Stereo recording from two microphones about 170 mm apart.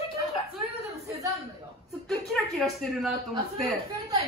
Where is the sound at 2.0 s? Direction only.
Centre (ahead or behind).